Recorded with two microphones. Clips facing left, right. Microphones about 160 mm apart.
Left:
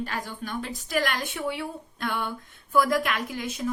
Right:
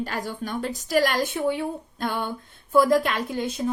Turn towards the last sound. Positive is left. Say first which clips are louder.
# right 4 dB
turn(degrees=-30)  # may be behind; listen again after turning